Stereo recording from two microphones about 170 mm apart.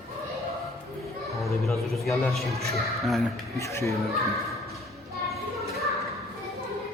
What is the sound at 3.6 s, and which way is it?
Speech, 15° left (ahead or behind).